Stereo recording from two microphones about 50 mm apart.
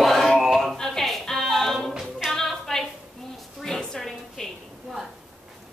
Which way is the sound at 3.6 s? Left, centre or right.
Centre.